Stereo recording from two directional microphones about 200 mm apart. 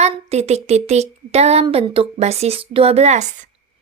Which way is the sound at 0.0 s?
30° right (ahead or behind).